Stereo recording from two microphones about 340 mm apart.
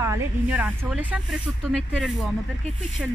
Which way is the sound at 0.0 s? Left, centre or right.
Centre.